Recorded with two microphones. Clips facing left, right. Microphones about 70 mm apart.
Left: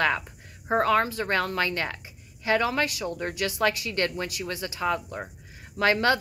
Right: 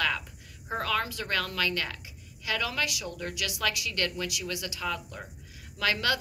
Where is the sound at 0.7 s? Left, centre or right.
Left.